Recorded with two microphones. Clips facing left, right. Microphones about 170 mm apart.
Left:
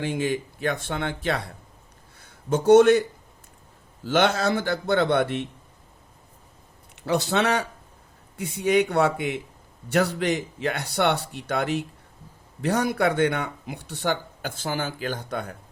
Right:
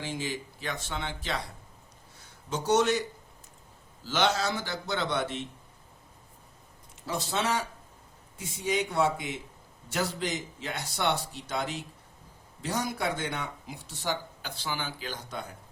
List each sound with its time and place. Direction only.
0.0 s speech: 55° left (ahead or behind)
4.0 s speech: 55° left (ahead or behind)
7.0 s speech: 70° left (ahead or behind)